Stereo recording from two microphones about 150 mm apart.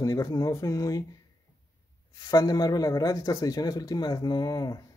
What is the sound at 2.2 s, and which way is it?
Speech, 25° left (ahead or behind).